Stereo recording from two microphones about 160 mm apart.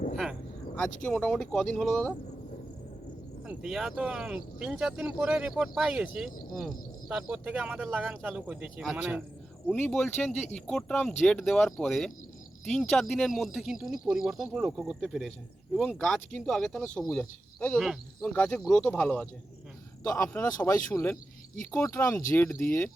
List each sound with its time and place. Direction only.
1.0 s speech: 5° left (ahead or behind)
3.4 s speech: 5° right (ahead or behind); by 19.3 s 10° left (ahead or behind)
20.1 s speech: 20° left (ahead or behind)